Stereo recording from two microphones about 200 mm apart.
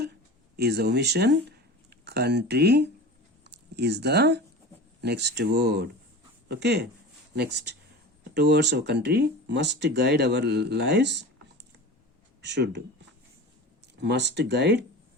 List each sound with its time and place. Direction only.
0.5 s speech: 55° right (ahead or behind)
12.4 s speech: 60° right (ahead or behind)
14.0 s speech: 60° right (ahead or behind)